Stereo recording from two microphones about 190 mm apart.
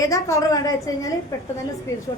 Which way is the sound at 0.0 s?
15° left (ahead or behind).